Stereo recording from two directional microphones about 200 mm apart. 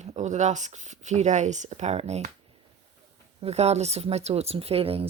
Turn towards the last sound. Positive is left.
turn(degrees=-30)  # may be behind; listen again after turning